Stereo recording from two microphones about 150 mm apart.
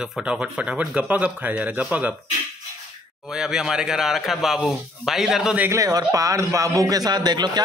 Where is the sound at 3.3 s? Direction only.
5° right (ahead or behind).